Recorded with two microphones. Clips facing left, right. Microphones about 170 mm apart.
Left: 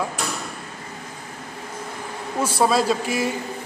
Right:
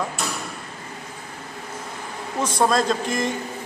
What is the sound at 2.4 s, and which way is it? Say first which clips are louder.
Speech: left 1 dB; 10° left (ahead or behind).